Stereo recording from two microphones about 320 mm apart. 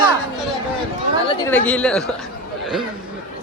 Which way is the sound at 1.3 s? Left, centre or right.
Centre.